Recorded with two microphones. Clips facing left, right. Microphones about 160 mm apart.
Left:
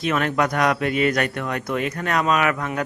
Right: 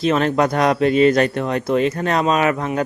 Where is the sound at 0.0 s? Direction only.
30° right (ahead or behind).